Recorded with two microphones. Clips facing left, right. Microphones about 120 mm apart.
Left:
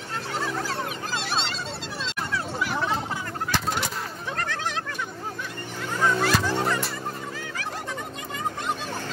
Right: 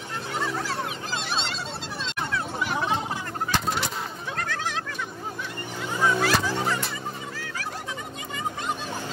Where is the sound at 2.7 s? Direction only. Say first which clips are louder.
Right 1 dB; 15° right (ahead or behind).